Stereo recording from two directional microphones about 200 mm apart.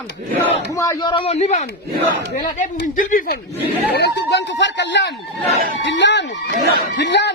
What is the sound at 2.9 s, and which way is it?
Speech, 40° left (ahead or behind).